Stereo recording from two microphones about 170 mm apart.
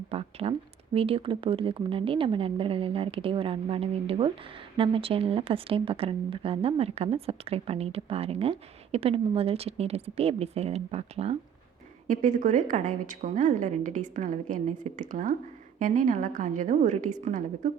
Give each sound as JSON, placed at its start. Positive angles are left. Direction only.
{"t": 0.1, "sound": "speech", "side_deg": -35}
{"t": 12.0, "sound": "a woman's voice", "side_deg": -50}